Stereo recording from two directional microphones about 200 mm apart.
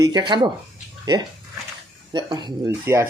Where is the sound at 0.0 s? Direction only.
20° right (ahead or behind).